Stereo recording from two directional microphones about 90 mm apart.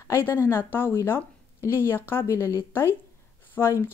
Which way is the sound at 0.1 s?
25° left (ahead or behind).